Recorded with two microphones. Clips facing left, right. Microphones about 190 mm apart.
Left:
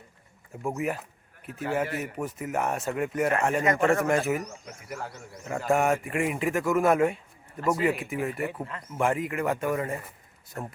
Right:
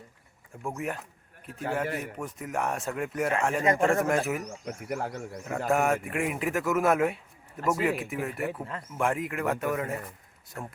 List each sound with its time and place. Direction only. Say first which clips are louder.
0.7 s a man's voice: left 4 dB; 5° left (ahead or behind)
4.9 s speech: right 4 dB; 55° right (ahead or behind)
5.5 s a man's voice: left 1 dB; centre (ahead or behind)